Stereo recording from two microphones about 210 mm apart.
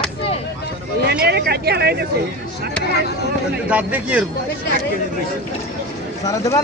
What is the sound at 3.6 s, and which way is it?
Speech, 5° right (ahead or behind).